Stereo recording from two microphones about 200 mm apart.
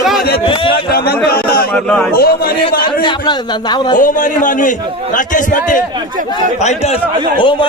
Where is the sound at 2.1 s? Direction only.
50° left (ahead or behind).